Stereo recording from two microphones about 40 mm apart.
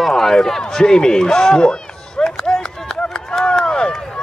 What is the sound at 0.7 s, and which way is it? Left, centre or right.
Run, centre.